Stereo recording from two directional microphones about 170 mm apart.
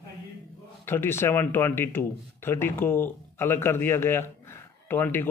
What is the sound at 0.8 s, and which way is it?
Speech, 15° left (ahead or behind).